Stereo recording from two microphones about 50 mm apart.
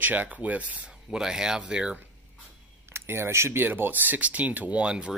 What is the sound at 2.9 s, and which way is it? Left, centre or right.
Speech, right.